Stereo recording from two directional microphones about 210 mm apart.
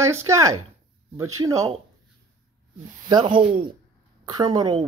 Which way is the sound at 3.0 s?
20° right (ahead or behind).